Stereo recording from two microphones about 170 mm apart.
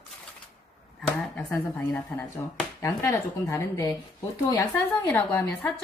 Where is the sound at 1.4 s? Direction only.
10° left (ahead or behind).